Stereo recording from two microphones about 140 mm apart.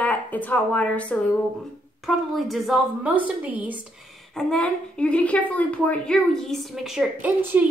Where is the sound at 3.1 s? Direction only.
10° right (ahead or behind).